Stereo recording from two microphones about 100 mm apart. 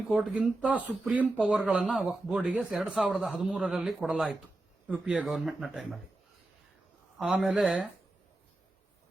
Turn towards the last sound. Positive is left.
turn(degrees=-10)  # may be behind; listen again after turning